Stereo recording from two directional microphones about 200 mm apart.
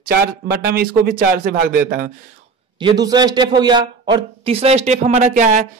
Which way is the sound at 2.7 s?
20° right (ahead or behind).